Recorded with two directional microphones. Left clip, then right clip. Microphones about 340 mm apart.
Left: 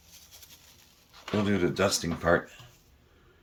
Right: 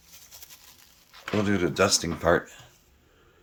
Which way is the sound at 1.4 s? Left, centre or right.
Centre.